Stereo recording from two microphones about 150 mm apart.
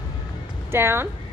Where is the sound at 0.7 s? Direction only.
15° right (ahead or behind).